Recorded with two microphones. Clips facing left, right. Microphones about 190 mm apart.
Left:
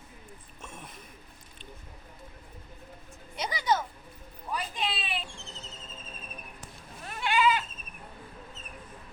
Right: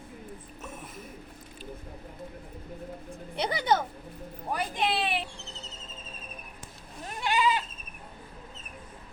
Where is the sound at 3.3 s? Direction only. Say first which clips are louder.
Right 3 dB; 60° right (ahead or behind).